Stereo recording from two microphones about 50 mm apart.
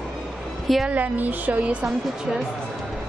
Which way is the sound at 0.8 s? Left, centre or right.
Right.